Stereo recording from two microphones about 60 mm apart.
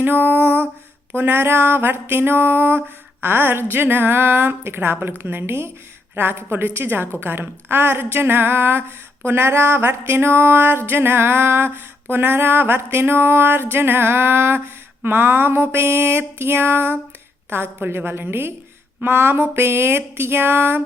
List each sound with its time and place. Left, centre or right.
0.0 s music: right